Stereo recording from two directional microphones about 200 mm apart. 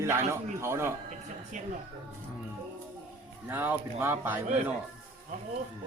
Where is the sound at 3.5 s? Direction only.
10° right (ahead or behind).